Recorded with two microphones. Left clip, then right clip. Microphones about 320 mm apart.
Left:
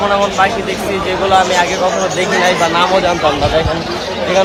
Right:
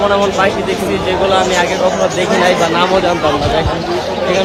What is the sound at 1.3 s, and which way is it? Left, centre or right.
Speech, centre.